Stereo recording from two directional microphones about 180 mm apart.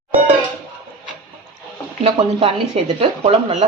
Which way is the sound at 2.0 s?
35° right (ahead or behind).